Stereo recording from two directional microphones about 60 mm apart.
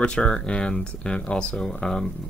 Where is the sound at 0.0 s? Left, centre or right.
Centre.